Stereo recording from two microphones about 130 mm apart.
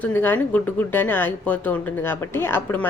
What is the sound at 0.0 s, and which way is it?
A woman's voice, 15° left (ahead or behind).